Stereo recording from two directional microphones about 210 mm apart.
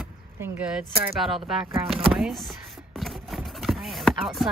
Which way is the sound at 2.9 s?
Centre (ahead or behind).